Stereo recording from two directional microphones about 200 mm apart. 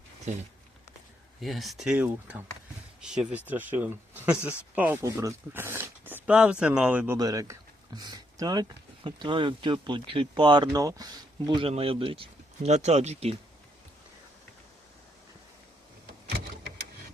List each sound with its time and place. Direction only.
0.3 s speech: 35° right (ahead or behind)
1.4 s speech: centre (ahead or behind)
7.2 s speech: 15° right (ahead or behind)